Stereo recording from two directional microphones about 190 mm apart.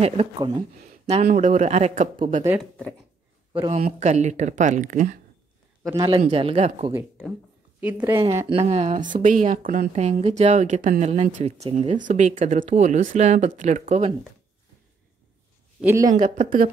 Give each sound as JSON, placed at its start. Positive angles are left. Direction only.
{"t": 0.0, "sound": "speech", "side_deg": -25}
{"t": 4.0, "sound": "speech", "side_deg": -35}
{"t": 6.0, "sound": "speech", "side_deg": -30}
{"t": 7.8, "sound": "a woman's voice", "side_deg": -10}
{"t": 8.2, "sound": "speech", "side_deg": -20}
{"t": 15.8, "sound": "a woman's voice", "side_deg": -15}